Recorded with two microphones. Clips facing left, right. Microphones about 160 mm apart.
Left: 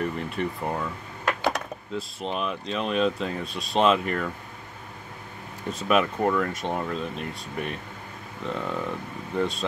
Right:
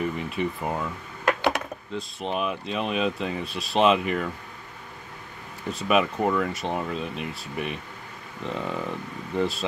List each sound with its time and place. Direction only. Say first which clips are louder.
0.0 s speech: right 1 dB; centre (ahead or behind)
5.7 s speech: even; centre (ahead or behind)